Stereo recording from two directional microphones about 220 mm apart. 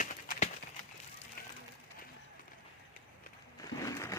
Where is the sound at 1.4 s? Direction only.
45° left (ahead or behind).